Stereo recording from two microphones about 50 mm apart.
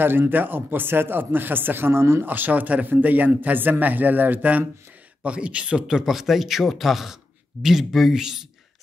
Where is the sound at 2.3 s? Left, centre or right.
Right.